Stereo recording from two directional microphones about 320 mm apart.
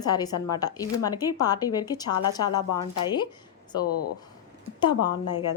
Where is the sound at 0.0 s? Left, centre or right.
Centre.